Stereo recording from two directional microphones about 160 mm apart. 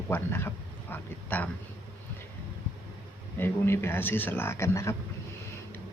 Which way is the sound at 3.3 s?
15° left (ahead or behind).